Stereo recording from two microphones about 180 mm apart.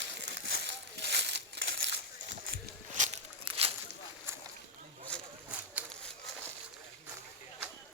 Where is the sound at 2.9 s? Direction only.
45° right (ahead or behind).